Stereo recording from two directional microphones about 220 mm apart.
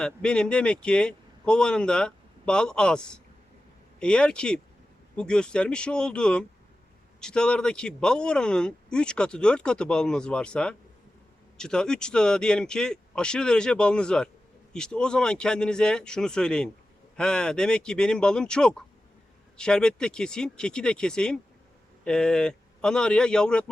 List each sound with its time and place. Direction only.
0.0 s speech: 5° left (ahead or behind)